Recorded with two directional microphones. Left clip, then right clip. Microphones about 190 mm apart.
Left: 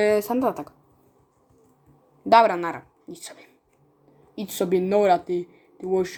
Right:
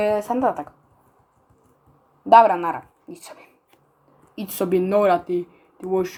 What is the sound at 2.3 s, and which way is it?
Speech, 20° left (ahead or behind).